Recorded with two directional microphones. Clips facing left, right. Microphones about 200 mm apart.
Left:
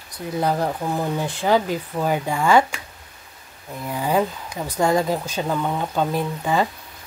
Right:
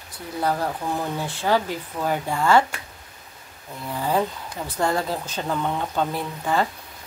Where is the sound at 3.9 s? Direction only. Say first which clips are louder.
Left 2 dB; 15° left (ahead or behind).